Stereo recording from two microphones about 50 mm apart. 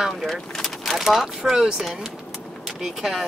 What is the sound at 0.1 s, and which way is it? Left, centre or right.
Speech, centre.